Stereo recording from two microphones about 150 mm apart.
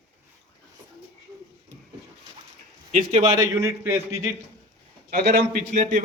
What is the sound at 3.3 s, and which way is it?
A man's voice, 25° right (ahead or behind).